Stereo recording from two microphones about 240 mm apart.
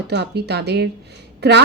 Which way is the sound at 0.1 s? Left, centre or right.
Right.